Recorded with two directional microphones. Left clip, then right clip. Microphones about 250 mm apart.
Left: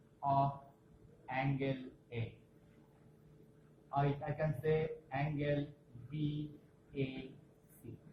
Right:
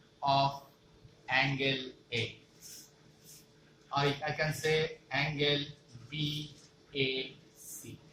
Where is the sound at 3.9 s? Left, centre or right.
Centre.